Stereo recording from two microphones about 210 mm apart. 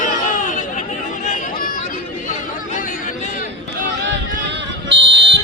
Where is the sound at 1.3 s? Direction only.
40° left (ahead or behind).